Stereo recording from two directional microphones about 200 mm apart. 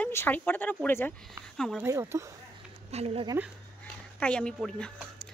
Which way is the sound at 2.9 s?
30° right (ahead or behind).